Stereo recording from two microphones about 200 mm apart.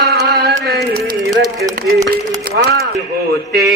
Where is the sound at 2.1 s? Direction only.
50° right (ahead or behind).